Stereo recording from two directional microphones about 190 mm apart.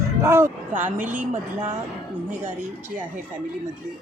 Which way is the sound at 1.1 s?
40° right (ahead or behind).